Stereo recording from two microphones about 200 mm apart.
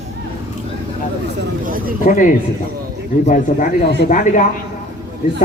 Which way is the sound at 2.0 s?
40° left (ahead or behind).